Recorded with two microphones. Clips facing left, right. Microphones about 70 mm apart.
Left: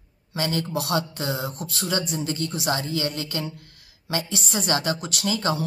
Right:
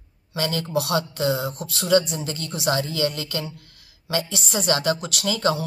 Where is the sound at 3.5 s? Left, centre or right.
Left.